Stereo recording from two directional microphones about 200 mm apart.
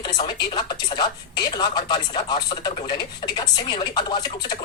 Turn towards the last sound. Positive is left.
turn(degrees=20)  # may be behind; listen again after turning